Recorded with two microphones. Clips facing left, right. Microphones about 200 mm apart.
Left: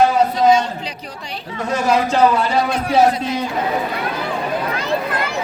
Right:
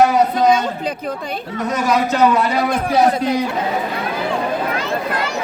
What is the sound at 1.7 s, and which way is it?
Speech, 30° left (ahead or behind).